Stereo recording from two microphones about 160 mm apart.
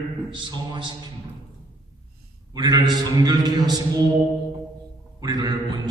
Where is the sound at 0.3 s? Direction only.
30° right (ahead or behind).